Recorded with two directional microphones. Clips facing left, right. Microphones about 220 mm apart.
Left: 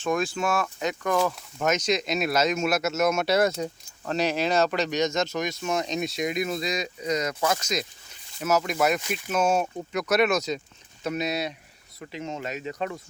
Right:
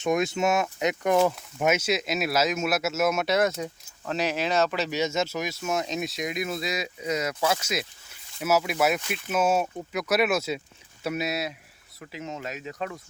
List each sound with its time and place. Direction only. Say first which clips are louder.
0.0 s speech: right 2 dB; 20° right (ahead or behind)
1.6 s speech: even; 10° right (ahead or behind)